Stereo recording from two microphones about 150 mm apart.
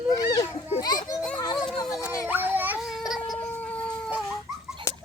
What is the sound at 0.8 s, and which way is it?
Speech, 25° left (ahead or behind).